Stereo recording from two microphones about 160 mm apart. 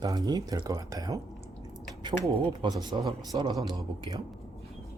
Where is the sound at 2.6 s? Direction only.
25° right (ahead or behind).